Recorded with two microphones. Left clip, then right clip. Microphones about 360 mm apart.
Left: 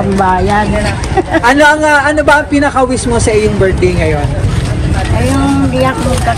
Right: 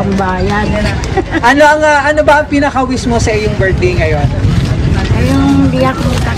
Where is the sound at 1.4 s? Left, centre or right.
Right.